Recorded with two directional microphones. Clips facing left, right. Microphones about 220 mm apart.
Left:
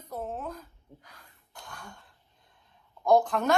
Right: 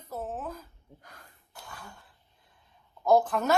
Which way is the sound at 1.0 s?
50° right (ahead or behind).